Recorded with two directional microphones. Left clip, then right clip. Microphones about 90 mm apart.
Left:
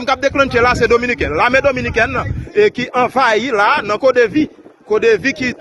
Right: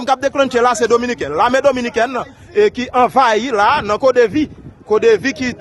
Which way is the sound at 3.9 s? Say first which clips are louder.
Even; 65° right (ahead or behind).